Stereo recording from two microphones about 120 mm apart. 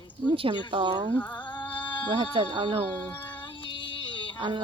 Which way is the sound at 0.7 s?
40° right (ahead or behind).